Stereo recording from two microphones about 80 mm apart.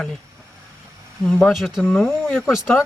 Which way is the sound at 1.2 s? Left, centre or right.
Centre.